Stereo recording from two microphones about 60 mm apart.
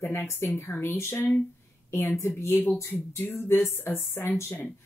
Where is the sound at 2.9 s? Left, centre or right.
Left.